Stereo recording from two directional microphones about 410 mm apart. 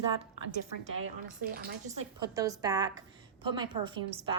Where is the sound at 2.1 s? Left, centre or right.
Centre.